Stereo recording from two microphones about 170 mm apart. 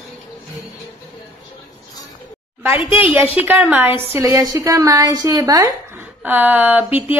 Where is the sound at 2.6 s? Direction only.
10° right (ahead or behind).